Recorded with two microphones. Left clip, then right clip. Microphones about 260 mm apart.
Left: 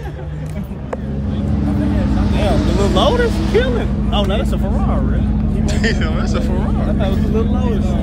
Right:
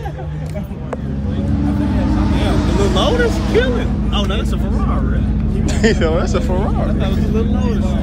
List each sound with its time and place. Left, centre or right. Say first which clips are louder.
2.8 s vehicle: left 1 dB; left
5.7 s speech: right 6 dB; centre
7.0 s speech: left 1 dB; left